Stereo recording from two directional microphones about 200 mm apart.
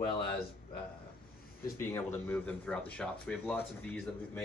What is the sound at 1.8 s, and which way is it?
Speech, 10° left (ahead or behind).